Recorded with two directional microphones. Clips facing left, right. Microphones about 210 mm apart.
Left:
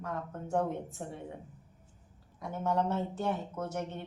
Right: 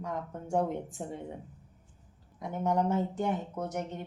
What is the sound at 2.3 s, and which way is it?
Speech, 20° right (ahead or behind).